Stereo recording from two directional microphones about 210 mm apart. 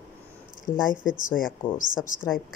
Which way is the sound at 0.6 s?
40° left (ahead or behind).